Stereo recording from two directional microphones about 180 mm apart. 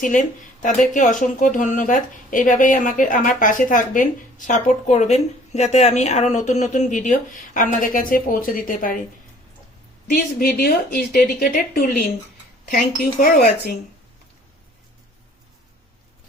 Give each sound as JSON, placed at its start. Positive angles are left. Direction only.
{"t": 0.0, "sound": "speech", "side_deg": 45}
{"t": 10.1, "sound": "a woman's voice", "side_deg": 55}